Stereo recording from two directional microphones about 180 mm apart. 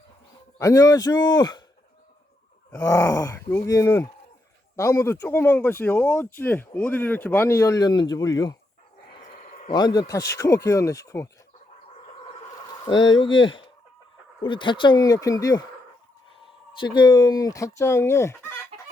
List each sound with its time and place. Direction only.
0.6 s speech: 20° left (ahead or behind)
2.7 s speech: 15° left (ahead or behind)
9.5 s a sound: 50° left (ahead or behind)
9.7 s speech: 20° left (ahead or behind)
13.1 s speech: 25° left (ahead or behind)
16.8 s speech: 25° left (ahead or behind)
18.7 s chicken: 35° right (ahead or behind)